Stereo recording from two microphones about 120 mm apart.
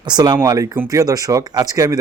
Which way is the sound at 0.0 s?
35° right (ahead or behind).